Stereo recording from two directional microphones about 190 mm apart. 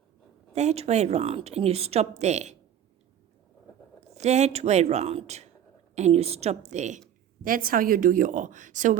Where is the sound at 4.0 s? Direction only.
35° right (ahead or behind).